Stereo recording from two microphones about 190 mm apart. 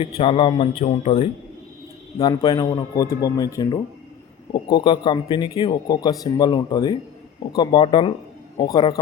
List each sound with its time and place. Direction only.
0.2 s speech: 30° left (ahead or behind)
2.2 s speech: 20° left (ahead or behind)